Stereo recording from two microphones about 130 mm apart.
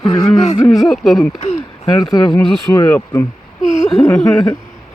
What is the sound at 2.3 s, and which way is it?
Speech, 25° left (ahead or behind).